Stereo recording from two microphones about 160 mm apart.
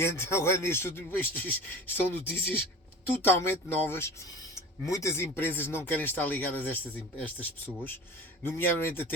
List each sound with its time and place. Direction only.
0.0 s a man's voice: 15° left (ahead or behind)
8.4 s a man's voice: 15° left (ahead or behind)